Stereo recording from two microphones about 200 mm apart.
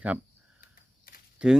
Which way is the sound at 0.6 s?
45° left (ahead or behind).